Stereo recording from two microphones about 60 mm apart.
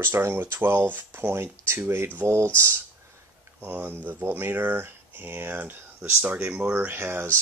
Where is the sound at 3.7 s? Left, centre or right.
Right.